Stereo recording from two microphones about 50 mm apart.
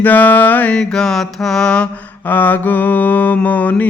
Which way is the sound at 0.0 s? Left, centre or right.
Left.